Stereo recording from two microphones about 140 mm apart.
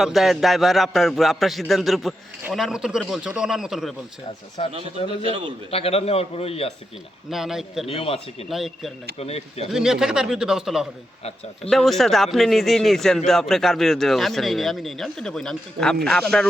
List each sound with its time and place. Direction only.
0.0 s speech: centre (ahead or behind)
4.6 s a man's voice: 45° left (ahead or behind)
5.2 s a man's voice: 35° right (ahead or behind)
5.7 s a man's voice: 45° left (ahead or behind)
7.3 s speech: 5° right (ahead or behind)
7.9 s a man's voice: 45° left (ahead or behind)
8.4 s speech: centre (ahead or behind)
9.1 s a man's voice: 45° left (ahead or behind)
9.7 s speech: 5° right (ahead or behind)